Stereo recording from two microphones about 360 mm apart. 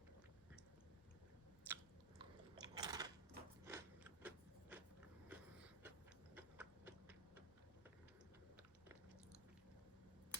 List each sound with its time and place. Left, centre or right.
1.6 s biting: centre
5.3 s a sound: centre
6.3 s clock: centre